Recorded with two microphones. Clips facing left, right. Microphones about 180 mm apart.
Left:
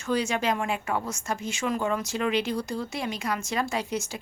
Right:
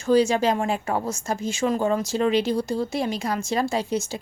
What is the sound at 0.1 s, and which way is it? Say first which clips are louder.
A woman's voice: right 7 dB; 30° right (ahead or behind).